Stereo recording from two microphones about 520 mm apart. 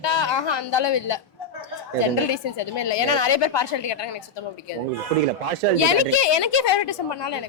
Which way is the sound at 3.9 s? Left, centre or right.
Left.